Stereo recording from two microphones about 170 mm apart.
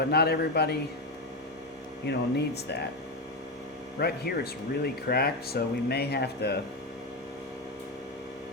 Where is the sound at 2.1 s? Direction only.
80° left.